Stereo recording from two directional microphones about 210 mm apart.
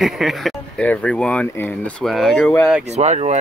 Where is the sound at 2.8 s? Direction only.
35° right (ahead or behind).